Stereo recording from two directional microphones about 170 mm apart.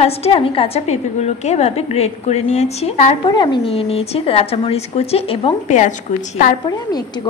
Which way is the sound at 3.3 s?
25° left (ahead or behind).